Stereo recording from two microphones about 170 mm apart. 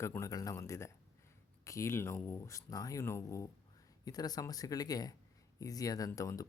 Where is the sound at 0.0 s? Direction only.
15° left (ahead or behind).